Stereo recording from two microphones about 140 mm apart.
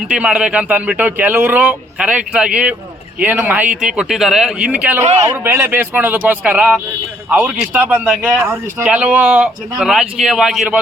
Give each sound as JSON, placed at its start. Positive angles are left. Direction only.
{"t": 0.1, "sound": "a man's voice", "side_deg": -10}